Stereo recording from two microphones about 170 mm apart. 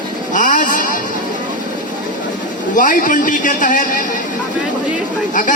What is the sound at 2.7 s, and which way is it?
Speech, 50° left (ahead or behind).